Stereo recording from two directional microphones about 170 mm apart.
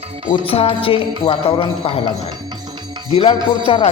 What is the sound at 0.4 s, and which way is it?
Speech, 35° left (ahead or behind).